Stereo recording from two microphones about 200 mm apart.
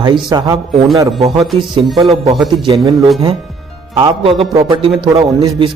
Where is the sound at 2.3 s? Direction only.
Centre (ahead or behind).